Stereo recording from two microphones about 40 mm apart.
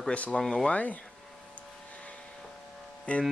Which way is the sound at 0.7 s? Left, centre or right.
Left.